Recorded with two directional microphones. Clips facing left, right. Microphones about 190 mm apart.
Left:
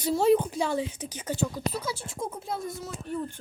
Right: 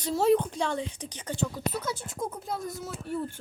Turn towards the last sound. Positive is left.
turn(degrees=-5)  # may be behind; listen again after turning